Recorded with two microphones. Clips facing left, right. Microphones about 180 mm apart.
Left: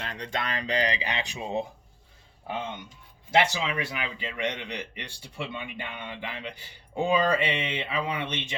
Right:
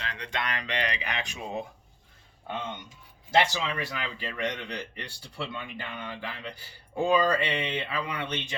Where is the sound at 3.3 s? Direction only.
15° left (ahead or behind).